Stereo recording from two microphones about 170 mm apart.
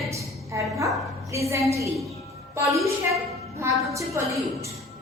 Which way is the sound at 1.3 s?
15° right (ahead or behind).